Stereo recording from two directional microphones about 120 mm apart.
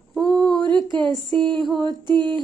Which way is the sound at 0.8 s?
40° right (ahead or behind).